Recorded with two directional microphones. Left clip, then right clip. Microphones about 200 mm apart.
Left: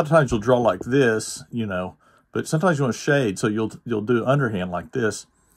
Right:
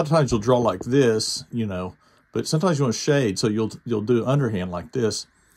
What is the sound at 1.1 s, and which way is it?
Speech, 20° left (ahead or behind).